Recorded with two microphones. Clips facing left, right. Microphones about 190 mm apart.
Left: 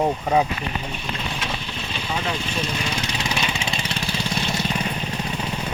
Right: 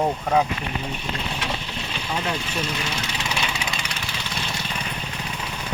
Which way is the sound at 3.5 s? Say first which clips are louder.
Left 3 dB; 25° left (ahead or behind).